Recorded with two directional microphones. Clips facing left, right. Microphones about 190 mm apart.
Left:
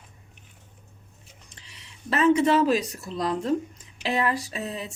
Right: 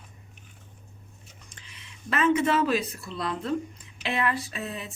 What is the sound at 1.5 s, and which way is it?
Speech, 35° left (ahead or behind).